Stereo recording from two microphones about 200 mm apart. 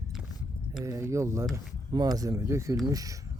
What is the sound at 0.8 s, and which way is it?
Speech, 15° right (ahead or behind).